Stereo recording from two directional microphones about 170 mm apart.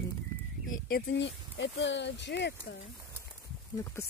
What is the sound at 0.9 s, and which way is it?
Speech, 90° left.